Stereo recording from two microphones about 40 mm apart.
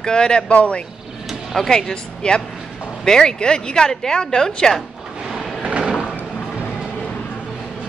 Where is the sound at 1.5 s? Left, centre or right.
Centre.